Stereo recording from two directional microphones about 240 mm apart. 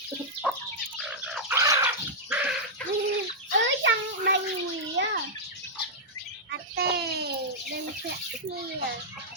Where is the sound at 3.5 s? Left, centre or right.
Right.